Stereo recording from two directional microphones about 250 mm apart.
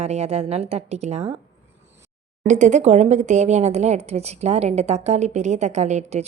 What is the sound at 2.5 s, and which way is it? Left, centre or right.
A woman's voice, right.